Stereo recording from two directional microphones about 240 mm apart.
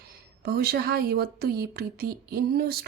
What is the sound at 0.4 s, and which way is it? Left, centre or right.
Speech, right.